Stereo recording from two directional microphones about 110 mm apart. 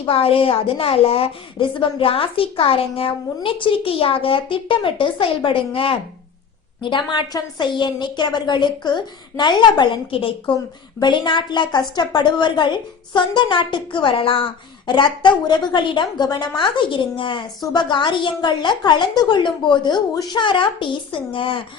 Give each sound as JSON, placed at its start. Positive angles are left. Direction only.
{"t": 0.0, "sound": "a woman's voice", "side_deg": 55}
{"t": 6.8, "sound": "a woman's voice", "side_deg": 45}
{"t": 11.0, "sound": "a woman's voice", "side_deg": 45}